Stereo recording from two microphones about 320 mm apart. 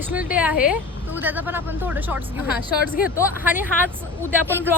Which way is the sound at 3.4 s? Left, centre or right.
Centre.